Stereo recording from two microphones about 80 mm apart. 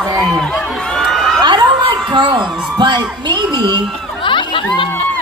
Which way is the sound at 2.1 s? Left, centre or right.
Right.